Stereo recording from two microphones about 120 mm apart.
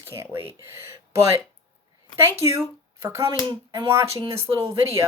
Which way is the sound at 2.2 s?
25° right (ahead or behind).